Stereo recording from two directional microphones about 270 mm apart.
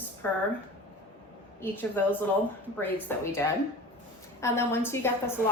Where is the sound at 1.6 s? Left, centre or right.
Centre.